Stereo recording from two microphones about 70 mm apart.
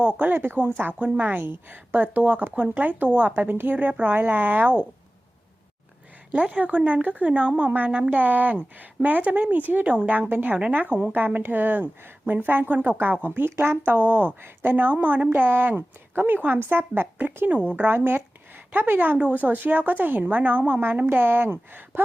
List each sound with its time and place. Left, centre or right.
0.2 s a woman's voice: right
6.3 s a woman's voice: centre